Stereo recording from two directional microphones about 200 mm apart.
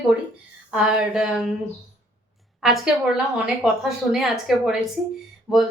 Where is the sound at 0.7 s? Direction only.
5° right (ahead or behind).